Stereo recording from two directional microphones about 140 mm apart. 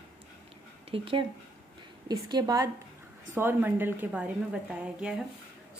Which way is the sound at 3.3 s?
15° right (ahead or behind).